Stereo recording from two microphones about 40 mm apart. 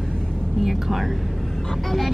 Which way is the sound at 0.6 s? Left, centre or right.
Centre.